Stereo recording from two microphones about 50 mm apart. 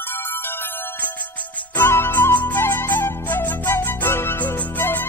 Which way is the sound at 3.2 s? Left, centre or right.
Left.